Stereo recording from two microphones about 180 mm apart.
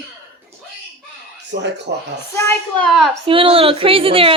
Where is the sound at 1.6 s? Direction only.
70° right (ahead or behind).